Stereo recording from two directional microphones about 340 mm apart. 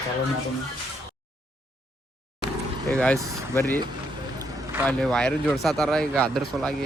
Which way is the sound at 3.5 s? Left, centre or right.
Centre.